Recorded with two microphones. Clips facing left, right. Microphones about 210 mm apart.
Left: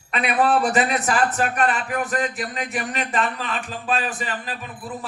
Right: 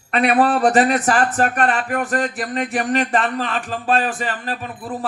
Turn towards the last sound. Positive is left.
turn(degrees=-45)  # may be behind; listen again after turning